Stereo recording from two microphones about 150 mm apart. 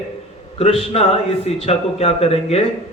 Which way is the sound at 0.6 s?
40° left (ahead or behind).